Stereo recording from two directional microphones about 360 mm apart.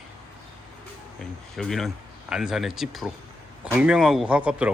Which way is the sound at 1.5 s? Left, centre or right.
Centre.